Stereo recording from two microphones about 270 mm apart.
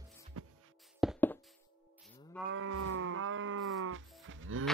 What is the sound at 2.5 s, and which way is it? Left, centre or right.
Livestock, right.